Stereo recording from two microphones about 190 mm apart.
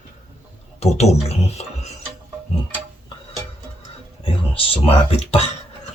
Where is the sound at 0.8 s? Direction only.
35° left (ahead or behind).